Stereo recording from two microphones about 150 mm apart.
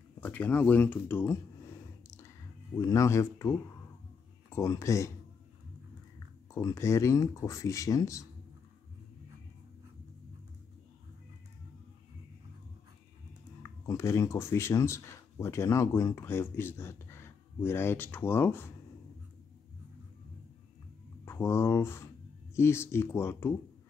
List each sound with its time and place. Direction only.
0.2 s a sound: 10° left (ahead or behind)
2.7 s speech: 20° left (ahead or behind)
6.1 s speech: 20° left (ahead or behind)
13.6 s speech: 20° left (ahead or behind)
21.3 s speech: 15° left (ahead or behind)